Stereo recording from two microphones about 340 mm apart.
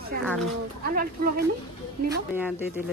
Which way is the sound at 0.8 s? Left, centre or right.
Right.